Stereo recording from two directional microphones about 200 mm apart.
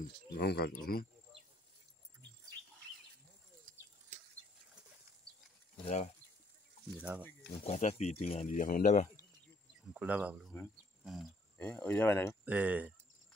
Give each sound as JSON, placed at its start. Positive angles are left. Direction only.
{"t": 0.3, "sound": "speech", "side_deg": 50}
{"t": 5.9, "sound": "speech", "side_deg": 35}
{"t": 7.0, "sound": "speech", "side_deg": -5}
{"t": 7.6, "sound": "speech", "side_deg": 35}
{"t": 9.9, "sound": "speech", "side_deg": -5}
{"t": 12.4, "sound": "speech", "side_deg": -5}